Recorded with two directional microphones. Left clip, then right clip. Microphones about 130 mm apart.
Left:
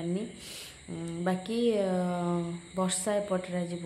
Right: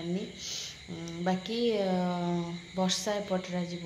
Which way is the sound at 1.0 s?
20° left (ahead or behind).